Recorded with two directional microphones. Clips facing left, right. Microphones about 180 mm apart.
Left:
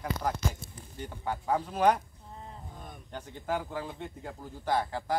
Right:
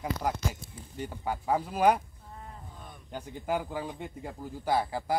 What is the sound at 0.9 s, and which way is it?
Speech, 10° right (ahead or behind).